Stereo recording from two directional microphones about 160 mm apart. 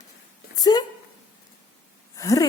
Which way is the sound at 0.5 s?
25° left (ahead or behind).